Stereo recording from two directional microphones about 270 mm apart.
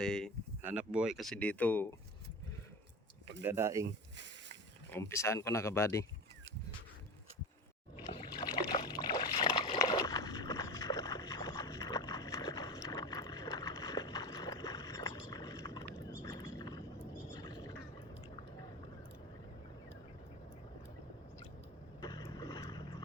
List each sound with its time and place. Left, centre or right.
0.0 s speech: centre
3.4 s speech: centre
3.8 s a sound: right
4.9 s speech: centre
8.1 s a sound: centre
22.0 s vehicle: centre